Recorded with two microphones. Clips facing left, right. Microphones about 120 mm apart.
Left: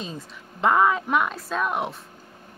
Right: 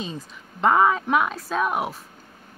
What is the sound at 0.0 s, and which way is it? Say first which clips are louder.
A woman's voice: right 2 dB; centre (ahead or behind).